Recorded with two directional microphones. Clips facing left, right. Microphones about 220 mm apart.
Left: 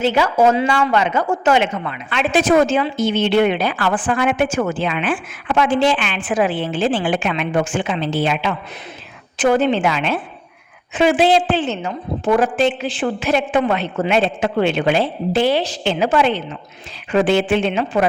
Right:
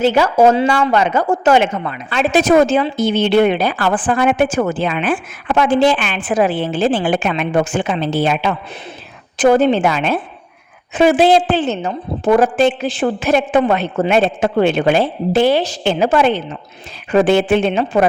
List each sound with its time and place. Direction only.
0.0 s a woman's voice: 40° right (ahead or behind)